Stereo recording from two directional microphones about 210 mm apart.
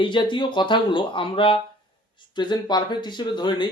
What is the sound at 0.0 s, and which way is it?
Speech, 20° left (ahead or behind).